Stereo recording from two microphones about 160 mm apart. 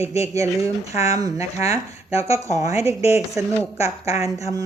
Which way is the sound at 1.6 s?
40° left (ahead or behind).